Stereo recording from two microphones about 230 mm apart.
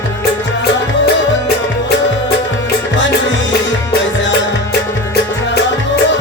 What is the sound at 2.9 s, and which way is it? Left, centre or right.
Music, left.